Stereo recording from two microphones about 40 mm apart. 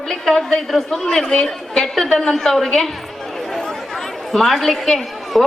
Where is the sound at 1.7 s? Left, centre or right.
Centre.